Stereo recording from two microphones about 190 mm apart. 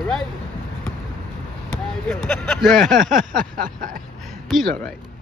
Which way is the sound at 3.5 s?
45° right (ahead or behind).